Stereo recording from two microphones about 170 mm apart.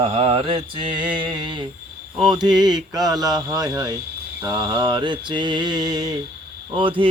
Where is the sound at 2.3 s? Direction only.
25° right (ahead or behind).